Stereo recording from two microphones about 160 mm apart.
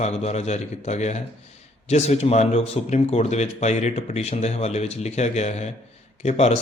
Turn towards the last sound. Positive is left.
turn(degrees=40)  # may be behind; listen again after turning